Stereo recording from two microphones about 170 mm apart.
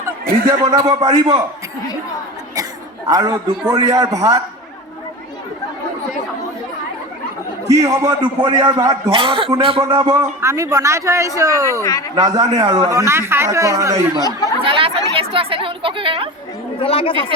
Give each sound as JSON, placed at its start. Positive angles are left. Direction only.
{"t": 0.6, "sound": "a man's voice", "side_deg": -20}
{"t": 3.1, "sound": "a man's voice", "side_deg": -25}
{"t": 7.9, "sound": "a man's voice", "side_deg": -25}
{"t": 9.1, "sound": "speech", "side_deg": -30}
{"t": 9.8, "sound": "a man's voice", "side_deg": -20}
{"t": 11.8, "sound": "speech", "side_deg": 15}
{"t": 12.1, "sound": "a man's voice", "side_deg": -25}
{"t": 14.2, "sound": "speech", "side_deg": 20}
{"t": 14.6, "sound": "speech", "side_deg": -30}
{"t": 16.8, "sound": "a woman's voice", "side_deg": 35}